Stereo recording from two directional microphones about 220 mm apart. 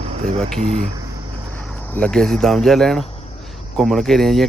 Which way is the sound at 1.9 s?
5° left (ahead or behind).